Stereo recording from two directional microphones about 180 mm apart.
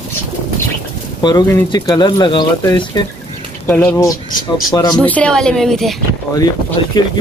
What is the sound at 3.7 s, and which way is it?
Speech, 10° left (ahead or behind).